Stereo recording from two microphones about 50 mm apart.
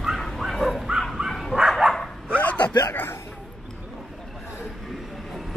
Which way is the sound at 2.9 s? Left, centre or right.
Left.